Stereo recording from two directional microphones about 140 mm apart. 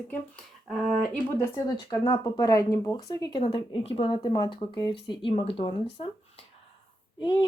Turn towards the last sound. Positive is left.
turn(degrees=30)  # may be behind; listen again after turning